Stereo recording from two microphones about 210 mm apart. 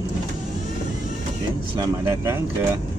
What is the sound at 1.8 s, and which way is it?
Speech, 10° right (ahead or behind).